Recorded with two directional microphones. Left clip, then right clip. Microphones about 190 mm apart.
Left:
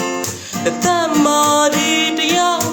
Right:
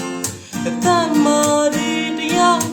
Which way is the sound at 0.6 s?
5° right (ahead or behind).